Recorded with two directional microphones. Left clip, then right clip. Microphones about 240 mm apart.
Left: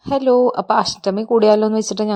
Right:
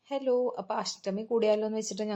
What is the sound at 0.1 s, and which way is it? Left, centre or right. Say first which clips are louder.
A woman's voice: left 14 dB; left.